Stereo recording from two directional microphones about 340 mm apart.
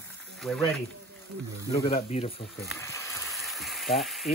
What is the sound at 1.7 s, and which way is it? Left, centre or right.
Speech, centre.